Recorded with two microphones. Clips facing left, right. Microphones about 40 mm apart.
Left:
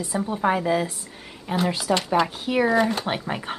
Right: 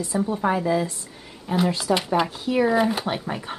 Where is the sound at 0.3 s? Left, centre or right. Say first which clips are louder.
Left 1 dB; centre.